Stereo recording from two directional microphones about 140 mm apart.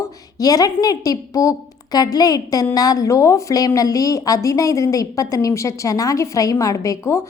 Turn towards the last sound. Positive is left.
turn(degrees=20)  # may be behind; listen again after turning